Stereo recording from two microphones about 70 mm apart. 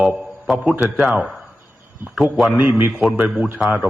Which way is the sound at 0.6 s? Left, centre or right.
Right.